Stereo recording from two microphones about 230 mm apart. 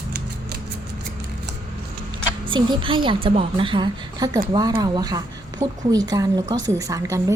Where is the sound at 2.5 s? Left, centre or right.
Right.